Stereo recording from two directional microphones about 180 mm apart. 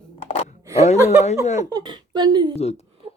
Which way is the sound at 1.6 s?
20° right (ahead or behind).